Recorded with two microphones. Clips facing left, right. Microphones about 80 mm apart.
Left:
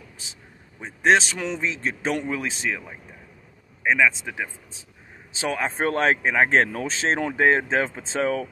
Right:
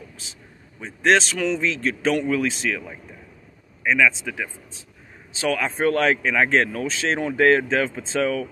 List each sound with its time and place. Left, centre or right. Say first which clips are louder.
1.0 s speech: right 1 dB; centre